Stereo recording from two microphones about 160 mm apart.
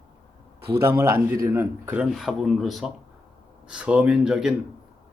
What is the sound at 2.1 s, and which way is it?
Speech, centre (ahead or behind).